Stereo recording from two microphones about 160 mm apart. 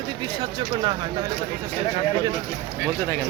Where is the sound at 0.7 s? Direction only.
25° right (ahead or behind).